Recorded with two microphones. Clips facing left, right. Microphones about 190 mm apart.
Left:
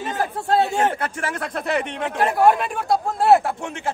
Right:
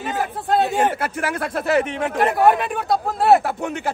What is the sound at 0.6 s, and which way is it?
Speech, 5° right (ahead or behind).